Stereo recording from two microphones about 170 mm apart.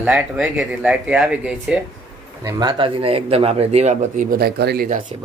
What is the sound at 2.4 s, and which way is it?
Speech, 20° right (ahead or behind).